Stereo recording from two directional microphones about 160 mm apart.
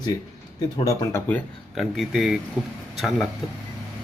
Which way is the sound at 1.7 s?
Centre (ahead or behind).